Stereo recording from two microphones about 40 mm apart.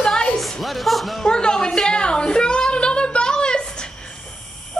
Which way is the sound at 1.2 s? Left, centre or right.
Centre.